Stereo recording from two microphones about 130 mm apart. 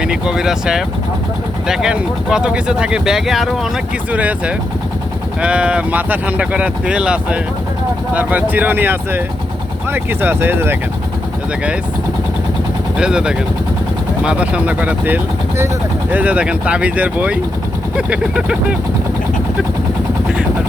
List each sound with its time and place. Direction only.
0.0 s speech: 5° right (ahead or behind)
13.0 s speech: 5° right (ahead or behind)